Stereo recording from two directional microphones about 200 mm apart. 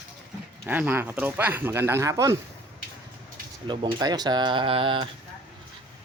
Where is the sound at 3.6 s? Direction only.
20° right (ahead or behind).